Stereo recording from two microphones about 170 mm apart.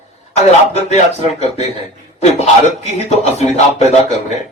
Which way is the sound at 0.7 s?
40° left (ahead or behind).